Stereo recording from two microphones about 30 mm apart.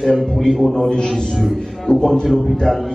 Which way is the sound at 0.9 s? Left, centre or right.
Left.